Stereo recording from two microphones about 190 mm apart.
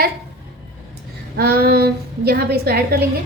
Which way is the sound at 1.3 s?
55° right (ahead or behind).